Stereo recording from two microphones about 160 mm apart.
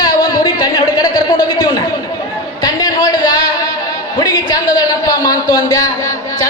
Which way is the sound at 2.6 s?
25° left (ahead or behind).